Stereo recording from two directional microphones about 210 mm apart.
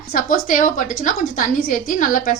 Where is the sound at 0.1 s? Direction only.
40° left (ahead or behind).